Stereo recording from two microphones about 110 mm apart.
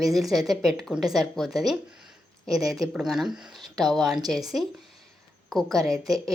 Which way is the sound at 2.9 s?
5° right (ahead or behind).